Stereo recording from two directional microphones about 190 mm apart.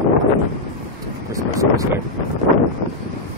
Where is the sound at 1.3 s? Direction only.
15° right (ahead or behind).